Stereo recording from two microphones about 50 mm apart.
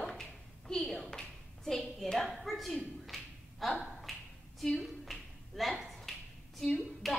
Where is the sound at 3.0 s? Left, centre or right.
Centre.